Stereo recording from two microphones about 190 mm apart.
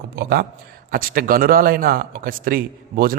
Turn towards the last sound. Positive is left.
turn(degrees=-50)  # may be behind; listen again after turning